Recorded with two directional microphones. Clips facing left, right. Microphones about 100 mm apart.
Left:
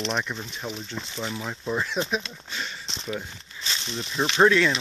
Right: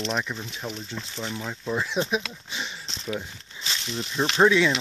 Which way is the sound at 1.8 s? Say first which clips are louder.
Right 1 dB; 10° right (ahead or behind).